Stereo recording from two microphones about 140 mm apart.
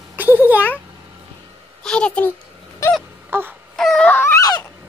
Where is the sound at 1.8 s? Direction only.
5° left (ahead or behind).